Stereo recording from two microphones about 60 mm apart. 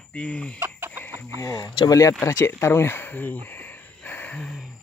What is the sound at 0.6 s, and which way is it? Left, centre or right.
Chicken, right.